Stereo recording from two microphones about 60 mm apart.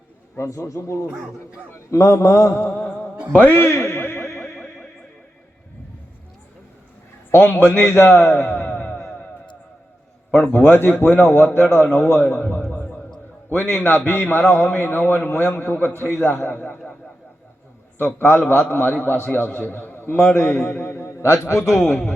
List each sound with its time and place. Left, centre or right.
0.3 s a man's voice: left
3.3 s a man's voice: left
3.6 s music: left
4.5 s music: centre
7.3 s a man's voice: left
8.4 s a sound: left; by 9.2 s centre
10.3 s a man's voice: centre
10.6 s a man's voice: left
12.2 s a sound: left
13.5 s a man's voice: left
17.9 s a man's voice: left
21.1 s a man's voice: left